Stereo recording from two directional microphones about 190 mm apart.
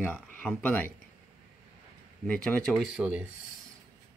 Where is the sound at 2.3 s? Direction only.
5° left (ahead or behind).